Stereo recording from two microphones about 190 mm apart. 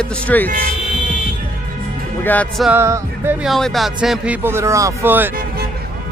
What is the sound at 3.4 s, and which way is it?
Speech, centre (ahead or behind).